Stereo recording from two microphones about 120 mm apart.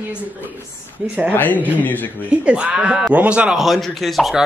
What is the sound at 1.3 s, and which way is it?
Speech, 15° left (ahead or behind).